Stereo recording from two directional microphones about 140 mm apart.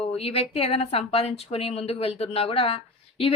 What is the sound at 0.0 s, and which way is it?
A woman's voice, 45° left (ahead or behind).